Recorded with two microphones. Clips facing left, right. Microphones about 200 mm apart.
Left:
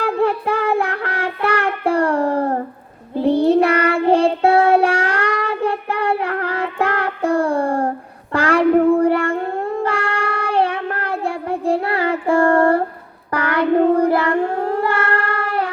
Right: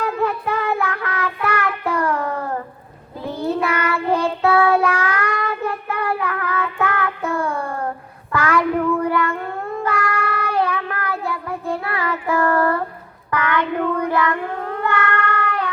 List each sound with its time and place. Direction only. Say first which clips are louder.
0.0 s child singing: left 4 dB; 30° left (ahead or behind)
9.0 s cat: left 4 dB; 30° left (ahead or behind)
9.6 s child singing: left 3 dB; 30° left (ahead or behind)